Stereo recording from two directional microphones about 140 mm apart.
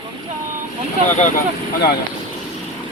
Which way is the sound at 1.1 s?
60° left (ahead or behind).